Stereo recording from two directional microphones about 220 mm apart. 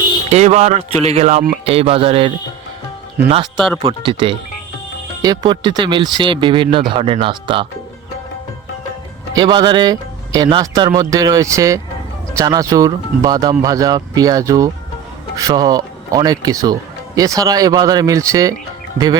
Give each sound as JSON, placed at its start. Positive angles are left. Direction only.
{"t": 0.3, "sound": "speech", "side_deg": -30}
{"t": 3.4, "sound": "speech", "side_deg": 0}
{"t": 3.8, "sound": "speech", "side_deg": -25}
{"t": 9.3, "sound": "speech", "side_deg": -20}